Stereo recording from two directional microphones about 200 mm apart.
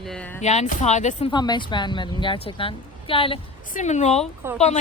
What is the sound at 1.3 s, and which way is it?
Speech, 20° left (ahead or behind).